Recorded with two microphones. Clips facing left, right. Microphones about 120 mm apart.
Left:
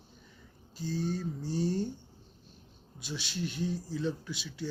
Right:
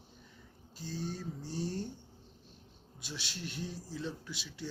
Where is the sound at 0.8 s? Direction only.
Centre (ahead or behind).